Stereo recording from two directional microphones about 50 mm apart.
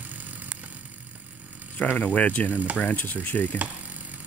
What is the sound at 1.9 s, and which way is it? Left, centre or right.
Speech, left.